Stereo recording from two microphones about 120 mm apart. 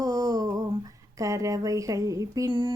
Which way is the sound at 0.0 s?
30° right (ahead or behind).